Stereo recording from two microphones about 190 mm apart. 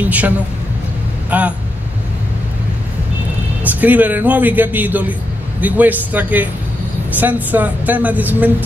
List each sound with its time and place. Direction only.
0.0 s a woman's voice: 10° right (ahead or behind)
1.3 s a woman's voice: 10° right (ahead or behind)
3.6 s a woman's voice: 10° right (ahead or behind)